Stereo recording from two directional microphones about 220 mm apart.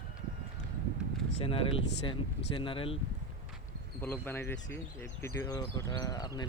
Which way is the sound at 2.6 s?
25° left (ahead or behind).